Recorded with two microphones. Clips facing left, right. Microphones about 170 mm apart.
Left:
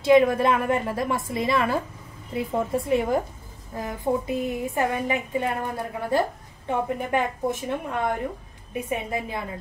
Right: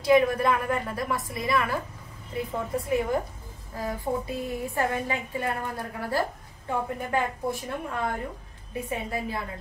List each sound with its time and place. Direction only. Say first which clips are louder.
0.0 s a woman's voice: left 3 dB; 25° left (ahead or behind)